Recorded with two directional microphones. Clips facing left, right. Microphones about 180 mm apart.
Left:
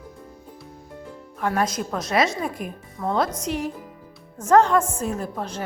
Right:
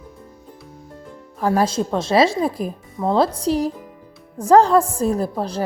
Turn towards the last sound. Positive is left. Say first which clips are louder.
# right 7 dB
turn(degrees=-35)  # may be behind; listen again after turning